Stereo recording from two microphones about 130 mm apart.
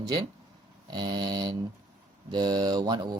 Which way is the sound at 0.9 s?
35° right (ahead or behind).